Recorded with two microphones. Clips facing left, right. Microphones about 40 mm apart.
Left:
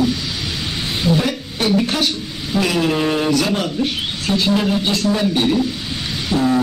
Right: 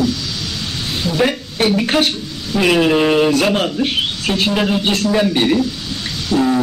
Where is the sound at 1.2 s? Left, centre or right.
Right.